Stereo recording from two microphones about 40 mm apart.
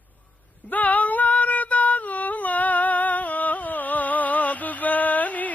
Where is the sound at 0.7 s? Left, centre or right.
Left.